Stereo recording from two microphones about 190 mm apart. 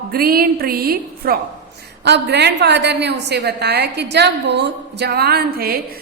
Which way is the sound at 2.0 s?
60° right (ahead or behind).